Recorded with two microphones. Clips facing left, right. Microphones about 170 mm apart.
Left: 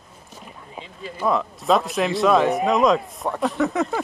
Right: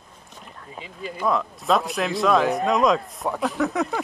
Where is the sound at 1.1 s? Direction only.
Centre (ahead or behind).